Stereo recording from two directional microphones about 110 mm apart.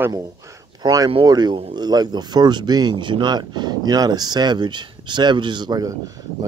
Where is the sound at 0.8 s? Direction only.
35° right (ahead or behind).